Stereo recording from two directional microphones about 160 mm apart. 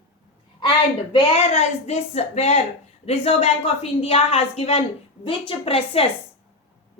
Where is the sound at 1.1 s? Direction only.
40° left (ahead or behind).